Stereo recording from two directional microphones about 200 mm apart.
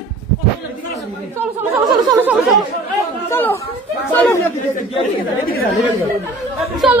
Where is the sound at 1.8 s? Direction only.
20° right (ahead or behind).